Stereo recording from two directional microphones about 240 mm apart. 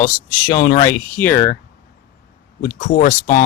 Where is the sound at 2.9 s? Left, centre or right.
Left.